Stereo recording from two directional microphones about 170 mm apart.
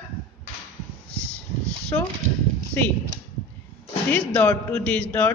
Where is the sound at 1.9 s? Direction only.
15° left (ahead or behind).